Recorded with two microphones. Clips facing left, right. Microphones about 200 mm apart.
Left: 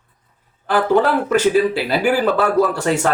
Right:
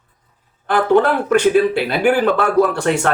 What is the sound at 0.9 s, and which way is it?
Speech, centre (ahead or behind).